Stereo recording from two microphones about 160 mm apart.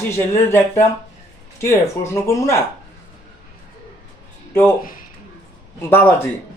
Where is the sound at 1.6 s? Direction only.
15° left (ahead or behind).